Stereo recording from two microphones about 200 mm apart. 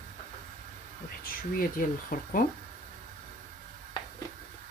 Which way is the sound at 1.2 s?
45° left (ahead or behind).